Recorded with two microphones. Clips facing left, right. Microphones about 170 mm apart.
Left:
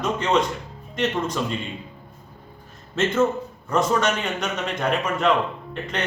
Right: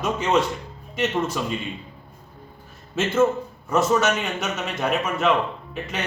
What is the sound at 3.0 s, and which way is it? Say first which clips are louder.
A man's voice: right 1 dB; 5° right (ahead or behind).